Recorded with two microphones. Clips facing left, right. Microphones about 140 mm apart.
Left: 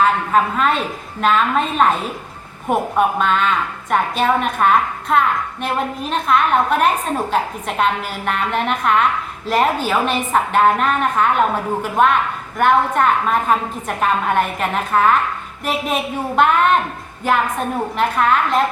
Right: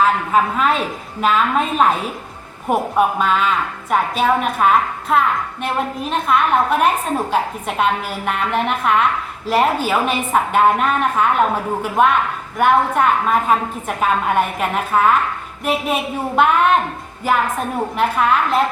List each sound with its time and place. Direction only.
0.5 s a woman's voice: 5° right (ahead or behind)